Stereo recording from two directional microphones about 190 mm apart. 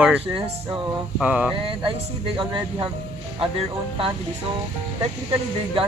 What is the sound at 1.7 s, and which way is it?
Speech, 25° right (ahead or behind).